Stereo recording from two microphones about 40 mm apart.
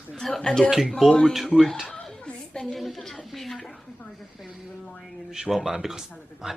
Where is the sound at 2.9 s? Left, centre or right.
Centre.